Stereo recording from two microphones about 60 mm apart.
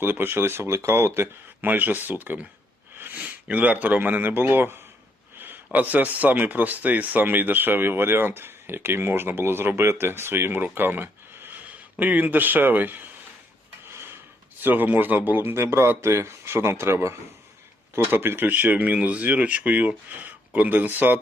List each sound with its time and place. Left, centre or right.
0.0 s speech: right
1.6 s speech: right
5.7 s speech: right
11.6 s speech: right
13.9 s a sound: right
14.6 s speech: right
18.0 s speech: right